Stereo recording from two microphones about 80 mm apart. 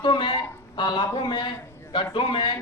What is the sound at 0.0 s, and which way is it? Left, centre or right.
A man's voice, left.